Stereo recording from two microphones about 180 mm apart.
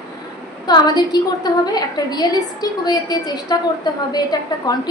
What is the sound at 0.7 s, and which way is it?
A woman's voice, 25° left (ahead or behind).